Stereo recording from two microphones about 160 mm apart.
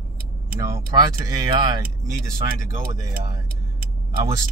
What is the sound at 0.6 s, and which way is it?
Speech, 20° right (ahead or behind).